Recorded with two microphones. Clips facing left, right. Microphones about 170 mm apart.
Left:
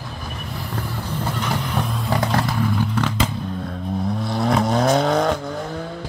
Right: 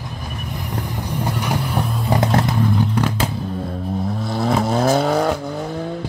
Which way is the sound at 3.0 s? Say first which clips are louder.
Right 1 dB; 10° right (ahead or behind).